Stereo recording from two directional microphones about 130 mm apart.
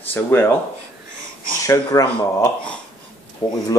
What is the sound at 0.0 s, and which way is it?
Speech, 15° left (ahead or behind).